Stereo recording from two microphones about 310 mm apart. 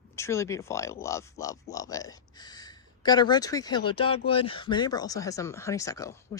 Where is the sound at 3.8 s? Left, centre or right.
Left.